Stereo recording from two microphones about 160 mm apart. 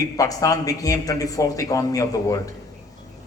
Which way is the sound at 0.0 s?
20° left (ahead or behind).